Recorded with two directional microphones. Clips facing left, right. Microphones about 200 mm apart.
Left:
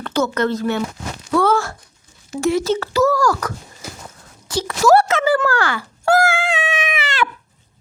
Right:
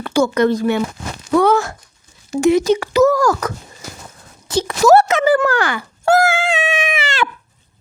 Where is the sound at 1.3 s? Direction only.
15° right (ahead or behind).